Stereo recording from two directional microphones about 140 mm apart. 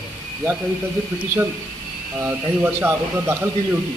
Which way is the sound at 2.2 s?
15° right (ahead or behind).